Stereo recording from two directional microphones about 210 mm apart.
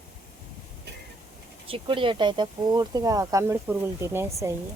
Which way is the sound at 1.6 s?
25° right (ahead or behind).